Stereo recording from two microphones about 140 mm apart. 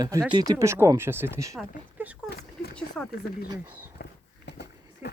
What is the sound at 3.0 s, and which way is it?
Speech, 5° left (ahead or behind).